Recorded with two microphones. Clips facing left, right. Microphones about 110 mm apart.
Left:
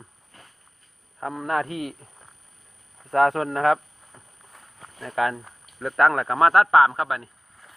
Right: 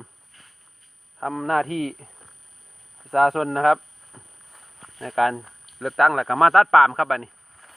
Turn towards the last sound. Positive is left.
turn(degrees=-50)  # may be behind; listen again after turning